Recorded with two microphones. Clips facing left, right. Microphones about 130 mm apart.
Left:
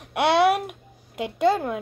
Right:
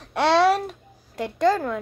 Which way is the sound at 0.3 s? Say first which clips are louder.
Right 1 dB; 55° left (ahead or behind).